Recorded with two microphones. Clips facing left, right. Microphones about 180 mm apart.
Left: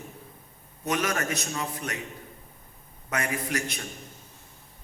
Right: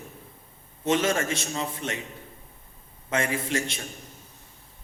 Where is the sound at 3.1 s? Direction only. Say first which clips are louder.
Right 3 dB; 25° right (ahead or behind).